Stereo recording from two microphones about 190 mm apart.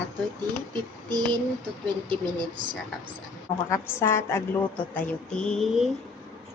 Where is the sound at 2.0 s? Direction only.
25° right (ahead or behind).